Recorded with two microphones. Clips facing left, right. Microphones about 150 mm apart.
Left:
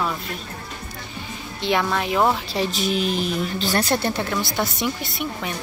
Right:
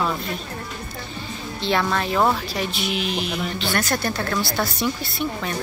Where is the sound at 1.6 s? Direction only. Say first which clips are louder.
Even; 10° left (ahead or behind).